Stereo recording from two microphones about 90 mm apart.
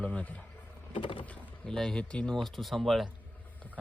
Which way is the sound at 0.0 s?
15° left (ahead or behind).